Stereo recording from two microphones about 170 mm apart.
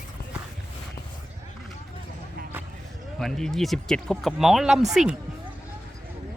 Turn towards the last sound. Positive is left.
turn(degrees=-5)  # may be behind; listen again after turning